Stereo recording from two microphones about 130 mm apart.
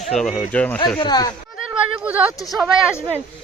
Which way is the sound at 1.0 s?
30° left (ahead or behind).